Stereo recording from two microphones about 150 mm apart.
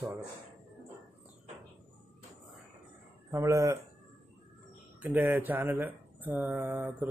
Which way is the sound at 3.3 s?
20° right (ahead or behind).